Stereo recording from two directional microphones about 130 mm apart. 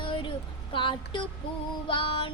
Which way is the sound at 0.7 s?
40° left (ahead or behind).